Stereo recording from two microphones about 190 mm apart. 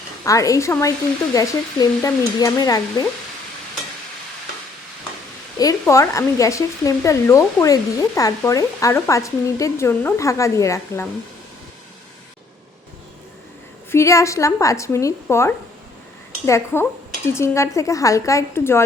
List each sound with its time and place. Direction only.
0.3 s speech: 15° left (ahead or behind)
5.5 s speech: 15° left (ahead or behind)
13.9 s speech: 15° left (ahead or behind)